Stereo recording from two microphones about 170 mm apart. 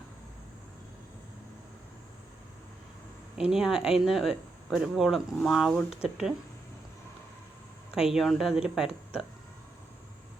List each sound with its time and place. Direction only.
3.3 s speech: 5° right (ahead or behind)
7.9 s speech: 5° right (ahead or behind)